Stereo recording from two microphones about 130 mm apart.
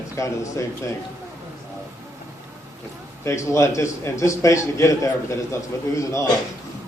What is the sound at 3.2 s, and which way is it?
A man's voice, 20° left (ahead or behind).